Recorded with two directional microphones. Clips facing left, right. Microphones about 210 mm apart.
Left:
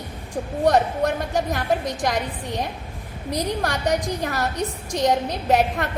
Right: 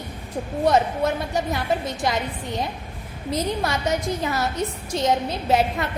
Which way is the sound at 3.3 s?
15° left (ahead or behind).